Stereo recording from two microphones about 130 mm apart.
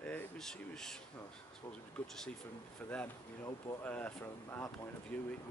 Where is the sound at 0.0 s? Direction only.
5° left (ahead or behind).